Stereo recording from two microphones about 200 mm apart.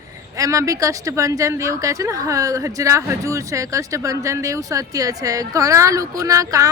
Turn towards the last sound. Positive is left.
turn(degrees=-15)  # may be behind; listen again after turning